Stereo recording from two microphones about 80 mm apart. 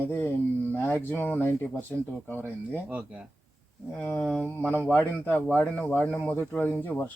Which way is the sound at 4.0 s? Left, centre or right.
Left.